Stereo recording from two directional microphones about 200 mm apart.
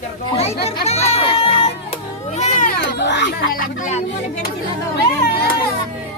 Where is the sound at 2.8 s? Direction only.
60° left (ahead or behind); by 4.0 s 40° left (ahead or behind).